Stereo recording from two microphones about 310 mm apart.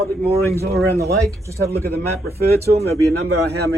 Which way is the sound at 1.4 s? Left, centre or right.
Centre.